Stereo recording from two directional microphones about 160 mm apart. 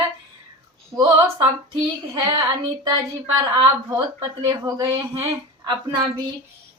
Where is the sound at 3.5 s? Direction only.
25° right (ahead or behind).